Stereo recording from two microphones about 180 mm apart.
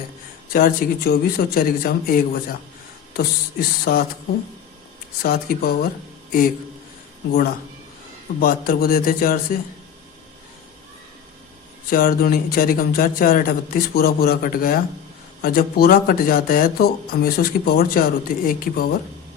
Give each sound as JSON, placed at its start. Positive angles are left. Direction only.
{"t": 0.5, "sound": "speech", "side_deg": 55}
{"t": 5.2, "sound": "speech", "side_deg": 55}
{"t": 8.4, "sound": "speech", "side_deg": 55}
{"t": 11.9, "sound": "speech", "side_deg": 50}